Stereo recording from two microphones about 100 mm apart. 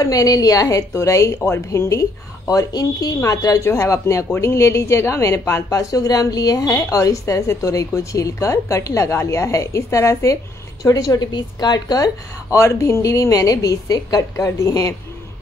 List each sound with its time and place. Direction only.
0.0 s speech: 35° left (ahead or behind)
12.5 s speech: 30° left (ahead or behind)